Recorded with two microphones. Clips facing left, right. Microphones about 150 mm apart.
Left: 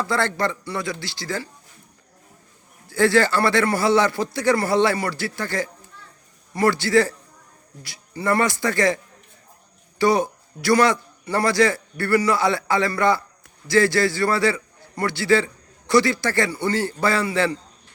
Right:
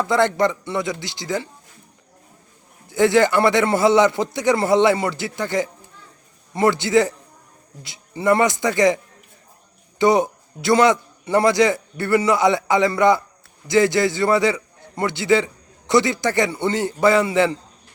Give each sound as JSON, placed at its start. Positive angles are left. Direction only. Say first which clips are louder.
{"t": 0.0, "sound": "a man's voice", "louder": "right 5 dB", "side_deg": -20}
{"t": 2.9, "sound": "a man's voice", "louder": "right 2 dB", "side_deg": -20}
{"t": 10.0, "sound": "a man's voice", "louder": "right 3 dB", "side_deg": -20}